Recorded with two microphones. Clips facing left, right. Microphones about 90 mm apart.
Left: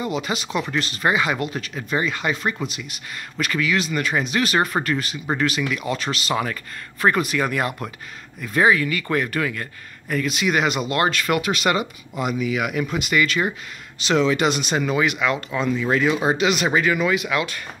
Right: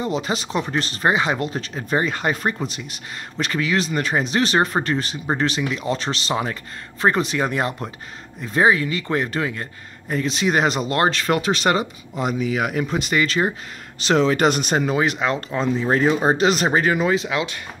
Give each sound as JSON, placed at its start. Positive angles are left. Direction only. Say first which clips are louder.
{"t": 0.0, "sound": "speech", "louder": "right 2 dB", "side_deg": -35}